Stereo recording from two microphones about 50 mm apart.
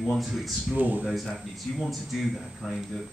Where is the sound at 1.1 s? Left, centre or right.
Centre.